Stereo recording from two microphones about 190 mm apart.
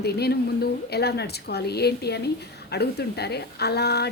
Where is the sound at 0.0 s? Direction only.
55° left (ahead or behind).